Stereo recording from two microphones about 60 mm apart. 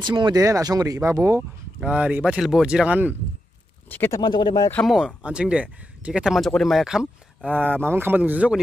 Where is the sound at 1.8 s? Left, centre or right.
Right.